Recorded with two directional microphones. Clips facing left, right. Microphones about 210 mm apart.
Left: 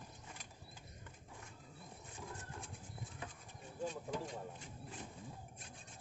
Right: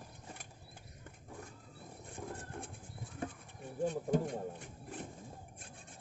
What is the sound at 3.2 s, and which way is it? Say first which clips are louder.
Bird: right 11 dB; 45° right (ahead or behind).